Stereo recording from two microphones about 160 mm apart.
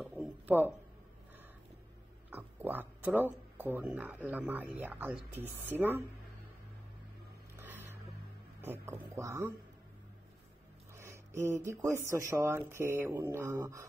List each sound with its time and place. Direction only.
0.0 s a sound: 10° right (ahead or behind)
2.3 s pig: 10° right (ahead or behind)
3.2 s speech: 10° right (ahead or behind)
7.5 s a sound: 15° right (ahead or behind)
8.5 s speech: 15° right (ahead or behind)
11.0 s speech: 15° right (ahead or behind)